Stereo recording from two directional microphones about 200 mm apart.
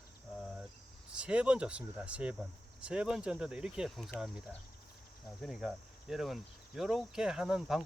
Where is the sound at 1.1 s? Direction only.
5° right (ahead or behind).